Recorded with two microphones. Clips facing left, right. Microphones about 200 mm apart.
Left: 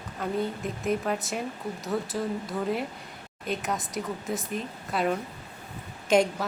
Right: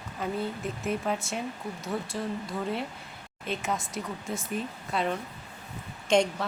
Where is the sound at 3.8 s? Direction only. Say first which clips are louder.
Left 3 dB; 20° left (ahead or behind).